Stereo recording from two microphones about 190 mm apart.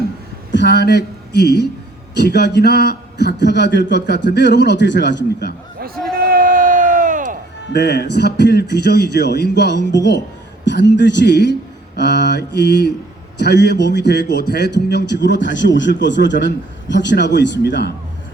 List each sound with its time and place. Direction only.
0.5 s a man's voice: 65° left (ahead or behind)
6.1 s crowd: 50° right (ahead or behind)
7.7 s a man's voice: 60° left (ahead or behind)